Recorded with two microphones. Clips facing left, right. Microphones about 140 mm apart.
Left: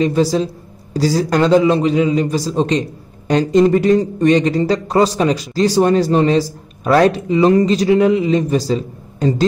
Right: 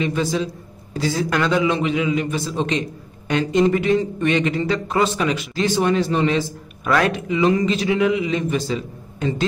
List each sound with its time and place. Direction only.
0.0 s a man's voice: 35° left (ahead or behind)